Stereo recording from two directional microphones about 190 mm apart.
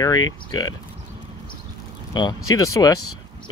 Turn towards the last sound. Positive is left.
turn(degrees=20)  # may be behind; listen again after turning